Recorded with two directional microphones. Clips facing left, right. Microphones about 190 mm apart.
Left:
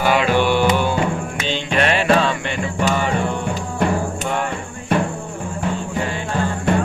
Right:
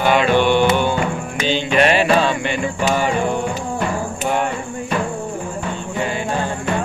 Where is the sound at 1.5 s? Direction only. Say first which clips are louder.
Right 4 dB; 5° right (ahead or behind).